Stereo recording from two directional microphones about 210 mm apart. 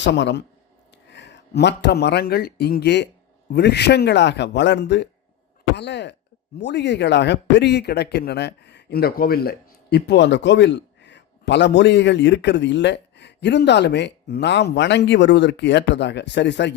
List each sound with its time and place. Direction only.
0.0 s a man's voice: 55° left (ahead or behind)